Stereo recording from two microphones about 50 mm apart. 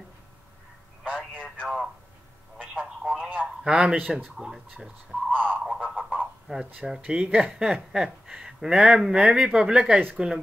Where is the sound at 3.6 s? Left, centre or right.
Centre.